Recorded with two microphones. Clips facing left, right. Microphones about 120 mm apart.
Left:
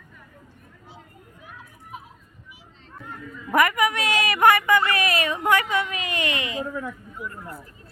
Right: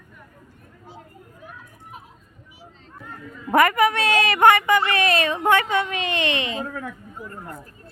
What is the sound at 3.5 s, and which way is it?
A woman's voice, 30° right (ahead or behind).